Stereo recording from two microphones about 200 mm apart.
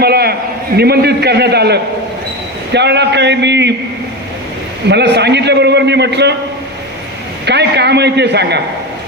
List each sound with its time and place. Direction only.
0.0 s a sound: 50° right (ahead or behind)
0.8 s a man's voice: 55° right (ahead or behind)
4.9 s a man's voice: 60° right (ahead or behind)
7.4 s a man's voice: 55° right (ahead or behind)